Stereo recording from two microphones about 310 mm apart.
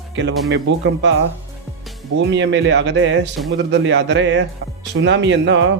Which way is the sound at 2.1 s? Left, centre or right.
Right.